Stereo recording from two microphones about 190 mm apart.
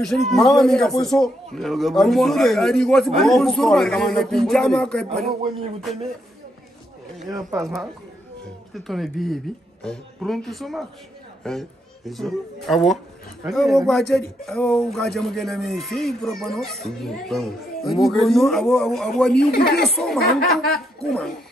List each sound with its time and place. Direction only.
0.0 s speech: centre (ahead or behind)
7.2 s speech: 15° right (ahead or behind)
7.6 s speech: centre (ahead or behind)
19.3 s speech: 60° left (ahead or behind)
19.8 s speech: centre (ahead or behind)